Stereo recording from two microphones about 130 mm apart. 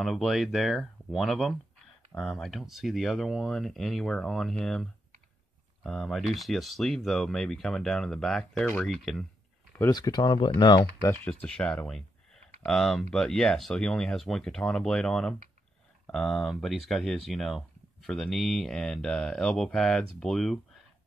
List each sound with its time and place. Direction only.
0.0 s speech: centre (ahead or behind)
5.9 s speech: centre (ahead or behind)
9.8 s speech: 25° left (ahead or behind)
10.8 s speech: 20° left (ahead or behind)
11.2 s speech: 10° left (ahead or behind)